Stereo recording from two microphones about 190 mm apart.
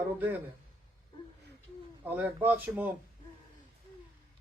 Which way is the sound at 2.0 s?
10° right (ahead or behind).